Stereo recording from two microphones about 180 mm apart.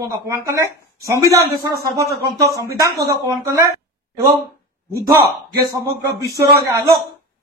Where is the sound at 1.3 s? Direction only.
60° right (ahead or behind).